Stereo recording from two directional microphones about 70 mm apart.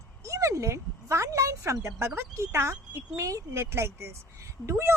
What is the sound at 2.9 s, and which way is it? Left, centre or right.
A woman's voice, right.